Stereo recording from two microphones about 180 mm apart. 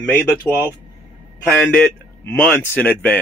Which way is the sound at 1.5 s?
5° left (ahead or behind).